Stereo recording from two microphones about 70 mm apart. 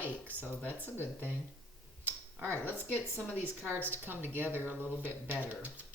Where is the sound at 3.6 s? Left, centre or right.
Right.